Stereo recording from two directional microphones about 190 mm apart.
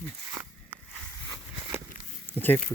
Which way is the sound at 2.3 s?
10° left (ahead or behind).